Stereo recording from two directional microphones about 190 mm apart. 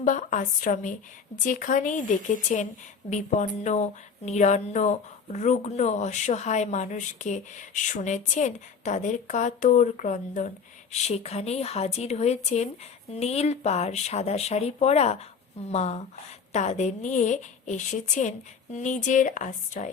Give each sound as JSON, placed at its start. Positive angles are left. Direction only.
{"t": 0.0, "sound": "speech", "side_deg": 40}